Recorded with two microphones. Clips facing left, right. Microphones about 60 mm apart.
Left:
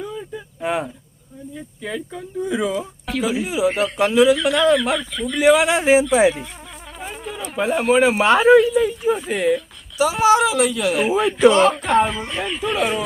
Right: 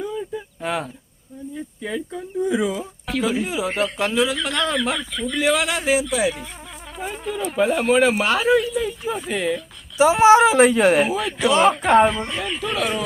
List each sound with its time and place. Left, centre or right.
0.0 s a sound: centre
0.6 s speech: centre
1.5 s speech: centre
5.6 s speech: left
7.0 s speech: centre
10.0 s speech: right
11.2 s speech: centre